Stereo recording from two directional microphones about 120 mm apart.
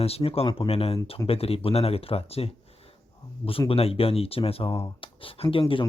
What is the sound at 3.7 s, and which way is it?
Speech, 55° left (ahead or behind).